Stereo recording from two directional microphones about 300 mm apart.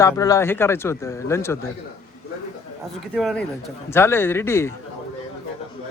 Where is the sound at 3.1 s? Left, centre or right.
Centre.